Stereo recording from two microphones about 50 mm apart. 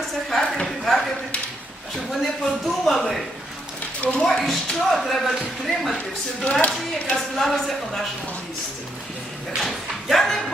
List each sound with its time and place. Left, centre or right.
0.1 s a sound: centre
2.0 s speech: centre
6.4 s speech: left
6.7 s speech: centre
9.6 s speech: centre